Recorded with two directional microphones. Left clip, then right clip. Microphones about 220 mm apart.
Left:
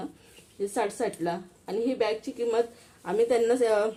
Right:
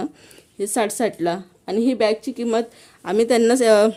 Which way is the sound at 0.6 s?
55° right (ahead or behind).